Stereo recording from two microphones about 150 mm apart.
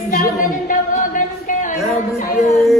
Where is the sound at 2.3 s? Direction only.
55° left (ahead or behind).